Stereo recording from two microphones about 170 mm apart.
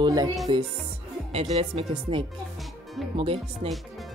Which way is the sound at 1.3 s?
35° right (ahead or behind).